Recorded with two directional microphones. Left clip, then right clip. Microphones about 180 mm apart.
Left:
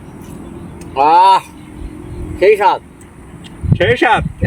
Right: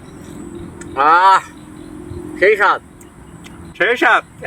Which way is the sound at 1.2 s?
40° right (ahead or behind).